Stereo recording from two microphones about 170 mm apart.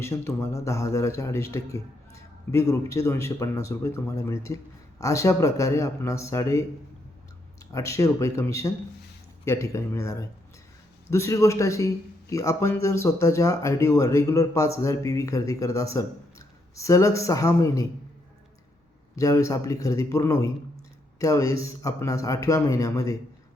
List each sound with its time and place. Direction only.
0.0 s a man's voice: 15° left (ahead or behind)
7.7 s a man's voice: 20° left (ahead or behind)
19.1 s speech: 20° left (ahead or behind)